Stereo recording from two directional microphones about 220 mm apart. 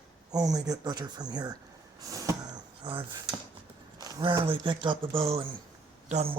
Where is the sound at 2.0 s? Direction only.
15° right (ahead or behind).